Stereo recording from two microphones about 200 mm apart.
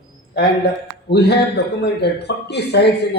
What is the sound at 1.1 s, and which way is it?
A man's voice, 55° left (ahead or behind).